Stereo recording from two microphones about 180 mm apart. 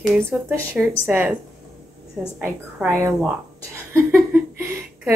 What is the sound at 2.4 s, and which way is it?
Speech, 15° right (ahead or behind).